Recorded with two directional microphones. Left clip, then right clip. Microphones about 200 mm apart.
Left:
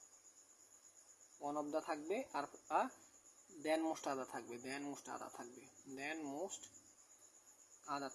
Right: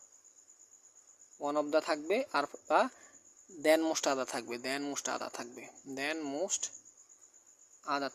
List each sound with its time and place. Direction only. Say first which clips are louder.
1.4 s speech: right 11 dB; 45° right (ahead or behind)
7.9 s speech: right 10 dB; 50° right (ahead or behind)